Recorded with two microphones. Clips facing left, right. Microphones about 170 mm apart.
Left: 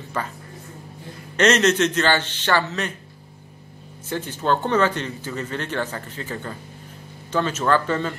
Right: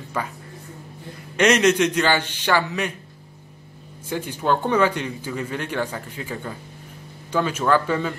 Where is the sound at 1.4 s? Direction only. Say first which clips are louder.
Right 1 dB; 10° right (ahead or behind).